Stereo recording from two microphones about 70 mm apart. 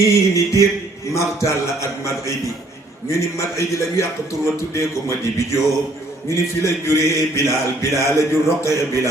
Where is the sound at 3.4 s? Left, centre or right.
Left.